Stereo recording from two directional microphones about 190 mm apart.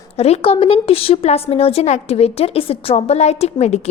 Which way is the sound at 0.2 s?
30° left (ahead or behind).